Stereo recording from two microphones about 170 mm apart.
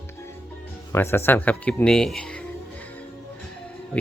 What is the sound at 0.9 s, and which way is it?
Speech, 15° left (ahead or behind).